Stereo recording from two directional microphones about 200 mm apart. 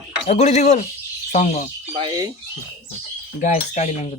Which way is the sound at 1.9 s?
25° right (ahead or behind).